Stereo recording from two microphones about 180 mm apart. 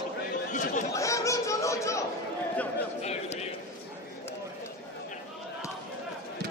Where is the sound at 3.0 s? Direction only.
35° left (ahead or behind).